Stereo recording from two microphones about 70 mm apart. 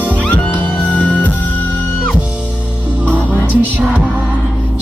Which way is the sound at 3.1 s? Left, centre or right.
Left.